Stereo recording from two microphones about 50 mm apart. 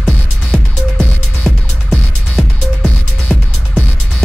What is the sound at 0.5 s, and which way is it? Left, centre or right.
Music, centre.